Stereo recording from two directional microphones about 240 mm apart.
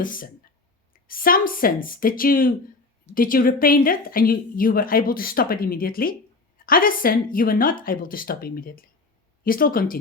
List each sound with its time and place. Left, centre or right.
0.0 s a woman's voice: left